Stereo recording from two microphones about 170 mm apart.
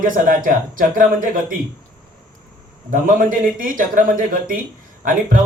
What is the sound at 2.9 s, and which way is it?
A man's voice, 55° right (ahead or behind).